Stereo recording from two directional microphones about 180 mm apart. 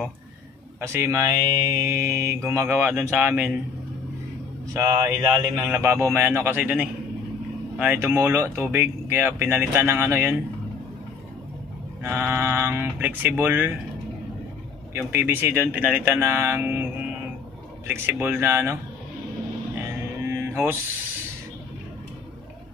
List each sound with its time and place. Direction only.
0.7 s speech: 15° right (ahead or behind)
4.7 s speech: 15° right (ahead or behind)
12.0 s speech: 15° right (ahead or behind)
15.0 s speech: 15° right (ahead or behind)
17.8 s speech: 15° right (ahead or behind)
20.2 s music: 15° right (ahead or behind)